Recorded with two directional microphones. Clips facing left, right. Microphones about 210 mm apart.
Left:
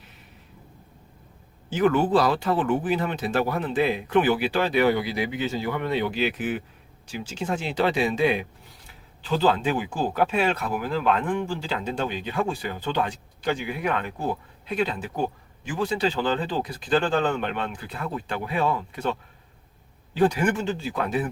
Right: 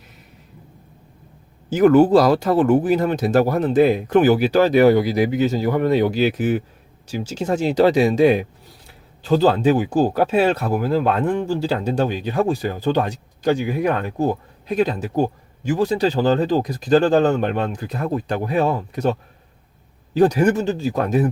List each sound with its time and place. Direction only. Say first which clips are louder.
1.7 s speech: right 8 dB; 40° right (ahead or behind)
20.1 s speech: right 6 dB; 40° right (ahead or behind)